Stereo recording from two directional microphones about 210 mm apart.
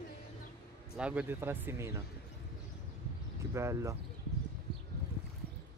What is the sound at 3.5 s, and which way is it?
Speech, 15° right (ahead or behind).